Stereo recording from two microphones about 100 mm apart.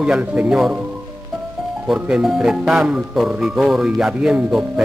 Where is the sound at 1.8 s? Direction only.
10° right (ahead or behind).